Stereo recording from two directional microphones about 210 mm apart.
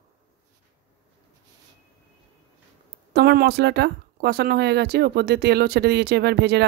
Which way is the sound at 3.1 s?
50° right (ahead or behind).